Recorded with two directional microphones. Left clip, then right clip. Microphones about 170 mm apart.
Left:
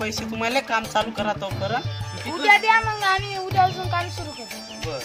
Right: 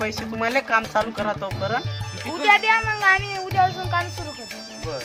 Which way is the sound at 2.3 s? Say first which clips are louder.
Left 1 dB; 45° right (ahead or behind).